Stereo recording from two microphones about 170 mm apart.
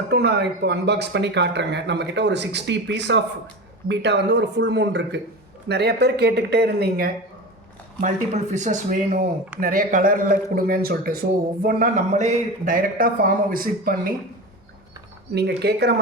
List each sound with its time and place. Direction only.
0.1 s speech: 75° right (ahead or behind)
5.6 s speech: 75° right (ahead or behind)
8.0 s speech: 40° right (ahead or behind); by 14.1 s 55° right (ahead or behind)
15.4 s speech: 75° right (ahead or behind)